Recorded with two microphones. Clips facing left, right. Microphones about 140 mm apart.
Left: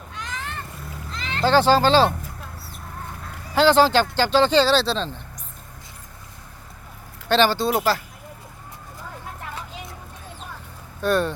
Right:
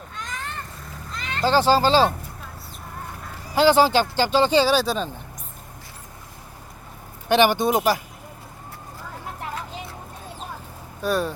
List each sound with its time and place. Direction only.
0.2 s vehicle: centre (ahead or behind)
1.1 s a sound: centre (ahead or behind)
1.5 s speech: 10° right (ahead or behind)
3.5 s speech: 10° right (ahead or behind)
7.3 s speech: 15° right (ahead or behind)
11.0 s speech: 5° right (ahead or behind)